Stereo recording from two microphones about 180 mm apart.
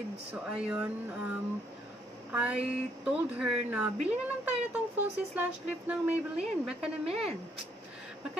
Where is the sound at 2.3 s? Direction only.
5° right (ahead or behind).